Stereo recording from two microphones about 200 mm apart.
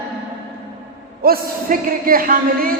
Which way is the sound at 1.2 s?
50° right (ahead or behind).